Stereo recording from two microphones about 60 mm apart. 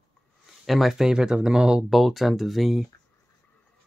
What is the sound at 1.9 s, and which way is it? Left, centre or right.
Speech, centre.